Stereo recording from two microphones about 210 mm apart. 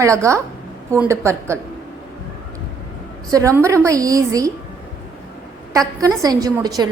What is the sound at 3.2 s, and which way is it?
A woman's voice, 15° right (ahead or behind).